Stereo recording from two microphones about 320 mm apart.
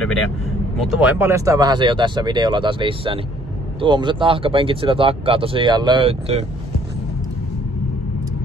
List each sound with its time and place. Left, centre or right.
0.8 s speech: centre